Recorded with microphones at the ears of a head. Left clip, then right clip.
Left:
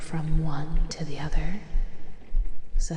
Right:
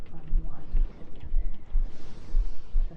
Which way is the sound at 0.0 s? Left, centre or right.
Left.